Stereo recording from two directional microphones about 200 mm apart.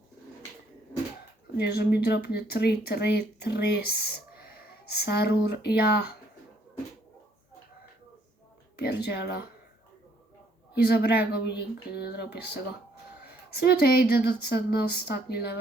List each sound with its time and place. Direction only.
1.5 s speech: 55° left (ahead or behind)
8.8 s speech: 55° left (ahead or behind)
10.8 s speech: 50° left (ahead or behind)